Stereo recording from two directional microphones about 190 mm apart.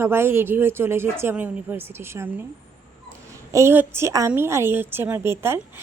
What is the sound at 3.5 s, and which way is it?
Speech, 10° right (ahead or behind).